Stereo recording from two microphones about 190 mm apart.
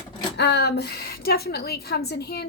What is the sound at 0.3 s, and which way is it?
A woman's voice, 60° left (ahead or behind).